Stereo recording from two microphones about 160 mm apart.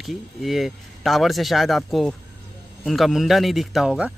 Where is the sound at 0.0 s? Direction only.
Centre (ahead or behind).